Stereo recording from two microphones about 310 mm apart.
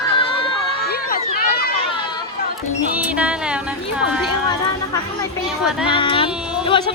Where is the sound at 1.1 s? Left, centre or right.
Left.